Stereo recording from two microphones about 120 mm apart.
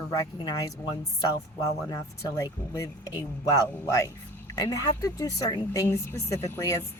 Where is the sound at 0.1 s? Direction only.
30° left (ahead or behind).